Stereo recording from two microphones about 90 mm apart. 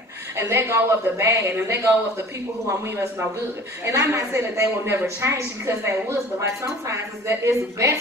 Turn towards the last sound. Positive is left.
turn(degrees=-35)  # may be behind; listen again after turning